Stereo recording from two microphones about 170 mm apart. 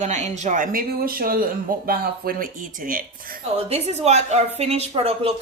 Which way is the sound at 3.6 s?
35° right (ahead or behind).